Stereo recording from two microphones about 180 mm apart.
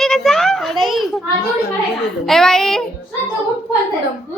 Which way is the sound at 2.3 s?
Centre (ahead or behind).